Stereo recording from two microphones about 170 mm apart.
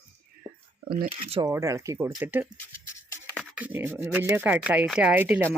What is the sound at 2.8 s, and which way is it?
Music, 15° left (ahead or behind).